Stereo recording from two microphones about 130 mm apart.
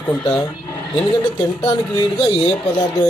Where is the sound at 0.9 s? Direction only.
35° left (ahead or behind).